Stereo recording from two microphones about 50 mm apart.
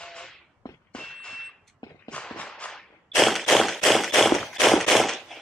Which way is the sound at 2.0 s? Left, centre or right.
Left.